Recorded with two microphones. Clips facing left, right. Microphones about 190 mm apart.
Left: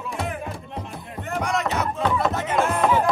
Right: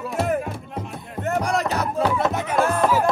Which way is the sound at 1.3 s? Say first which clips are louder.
Right 3 dB; 35° right (ahead or behind).